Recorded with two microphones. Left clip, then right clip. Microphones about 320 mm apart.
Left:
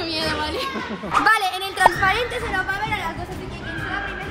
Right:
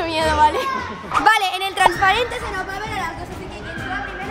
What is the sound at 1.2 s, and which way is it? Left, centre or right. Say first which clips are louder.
A woman's voice: right 4 dB; right.